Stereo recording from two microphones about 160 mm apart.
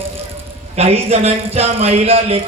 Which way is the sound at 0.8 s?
40° right (ahead or behind).